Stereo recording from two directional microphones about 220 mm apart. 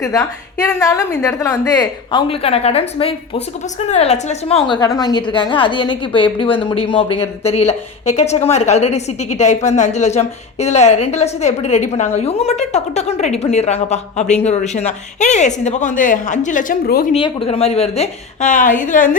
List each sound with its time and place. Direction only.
0.0 s a woman's voice: 15° left (ahead or behind); by 17.1 s 40° left (ahead or behind)
17.1 s a woman's voice: 25° left (ahead or behind)